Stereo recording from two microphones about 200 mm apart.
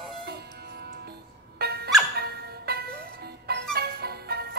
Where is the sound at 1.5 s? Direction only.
50° right (ahead or behind).